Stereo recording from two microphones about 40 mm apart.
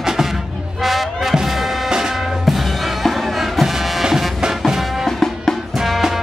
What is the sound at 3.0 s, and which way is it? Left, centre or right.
Music, centre.